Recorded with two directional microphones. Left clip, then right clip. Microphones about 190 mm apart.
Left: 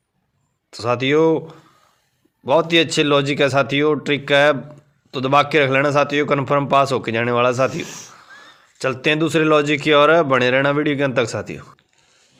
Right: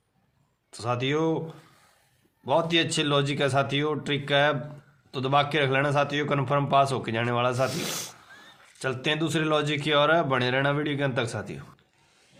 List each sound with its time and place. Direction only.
0.7 s a man's voice: 35° left (ahead or behind)
7.9 s speech: 60° right (ahead or behind)
8.3 s a man's voice: 35° left (ahead or behind)